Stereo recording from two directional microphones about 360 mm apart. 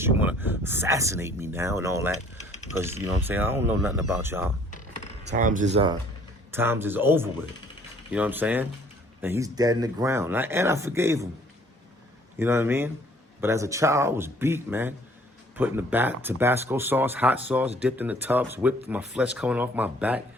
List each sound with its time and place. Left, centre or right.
0.0 s speech: centre
5.2 s speech: right
12.4 s speech: centre